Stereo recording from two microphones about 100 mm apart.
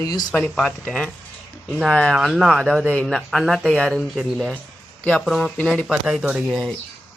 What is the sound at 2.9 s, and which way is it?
Speech, 10° left (ahead or behind).